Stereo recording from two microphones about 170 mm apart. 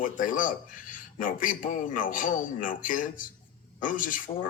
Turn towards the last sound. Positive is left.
turn(degrees=50)  # may be behind; listen again after turning